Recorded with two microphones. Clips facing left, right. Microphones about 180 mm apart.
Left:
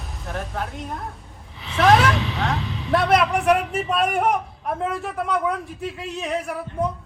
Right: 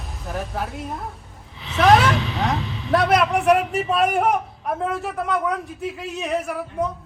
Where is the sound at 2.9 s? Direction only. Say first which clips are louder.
Right 1 dB; centre (ahead or behind).